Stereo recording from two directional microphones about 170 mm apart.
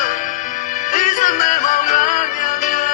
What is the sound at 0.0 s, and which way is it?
Music, 50° left (ahead or behind).